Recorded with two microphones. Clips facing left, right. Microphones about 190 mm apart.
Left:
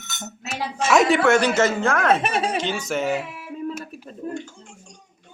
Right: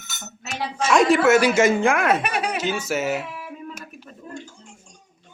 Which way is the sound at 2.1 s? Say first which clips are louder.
Left 2 dB; 25° left (ahead or behind).